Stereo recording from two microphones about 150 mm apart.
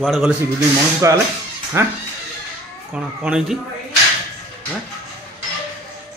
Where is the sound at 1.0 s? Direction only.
20° right (ahead or behind).